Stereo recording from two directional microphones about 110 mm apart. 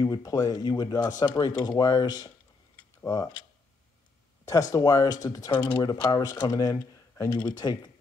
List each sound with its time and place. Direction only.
0.0 s speech: 35° left (ahead or behind)
4.5 s speech: 35° left (ahead or behind)
5.5 s speech: 45° left (ahead or behind)